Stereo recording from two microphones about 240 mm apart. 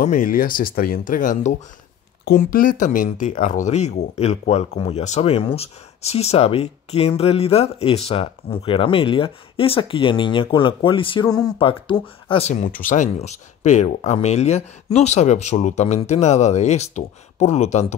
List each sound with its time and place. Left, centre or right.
0.0 s speech: left